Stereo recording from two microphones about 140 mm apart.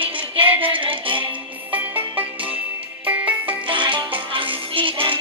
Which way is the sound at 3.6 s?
35° right (ahead or behind).